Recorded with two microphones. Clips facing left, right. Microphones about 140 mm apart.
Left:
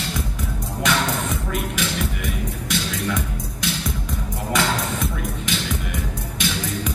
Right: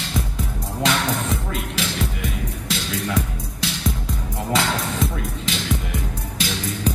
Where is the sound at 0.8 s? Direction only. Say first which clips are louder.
Even; 30° right (ahead or behind).